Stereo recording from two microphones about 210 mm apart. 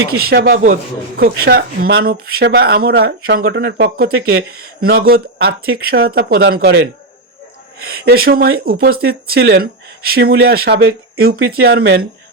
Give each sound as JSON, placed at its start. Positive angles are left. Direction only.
{"t": 0.1, "sound": "speech", "side_deg": -45}
{"t": 7.8, "sound": "speech", "side_deg": -50}